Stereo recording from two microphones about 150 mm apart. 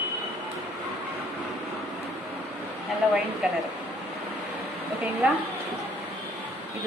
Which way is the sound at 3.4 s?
5° right (ahead or behind).